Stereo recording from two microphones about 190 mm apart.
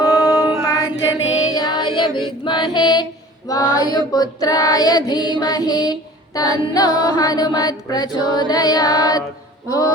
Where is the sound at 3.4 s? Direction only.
20° left (ahead or behind).